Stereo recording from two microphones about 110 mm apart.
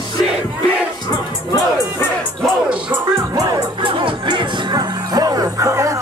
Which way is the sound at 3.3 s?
35° right (ahead or behind).